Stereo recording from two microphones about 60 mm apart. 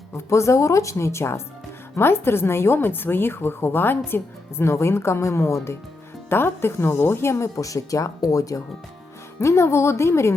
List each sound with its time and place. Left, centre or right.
0.3 s a woman's voice: left
6.3 s a woman's voice: left
9.4 s a woman's voice: left